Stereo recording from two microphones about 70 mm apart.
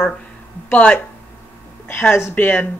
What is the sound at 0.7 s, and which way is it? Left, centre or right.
Speech, left.